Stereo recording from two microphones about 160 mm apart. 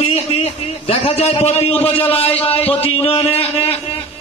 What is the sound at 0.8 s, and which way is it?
A man's voice, 40° left (ahead or behind).